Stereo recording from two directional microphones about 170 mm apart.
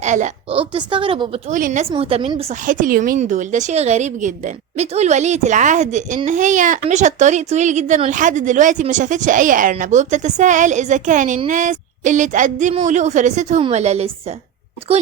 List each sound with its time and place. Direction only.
0.0 s a woman's voice: 45° right (ahead or behind)
0.6 s a woman's voice: 30° right (ahead or behind)
1.5 s speech: 50° right (ahead or behind)
1.9 s a woman's voice: 35° right (ahead or behind)
2.6 s speech: 50° right (ahead or behind)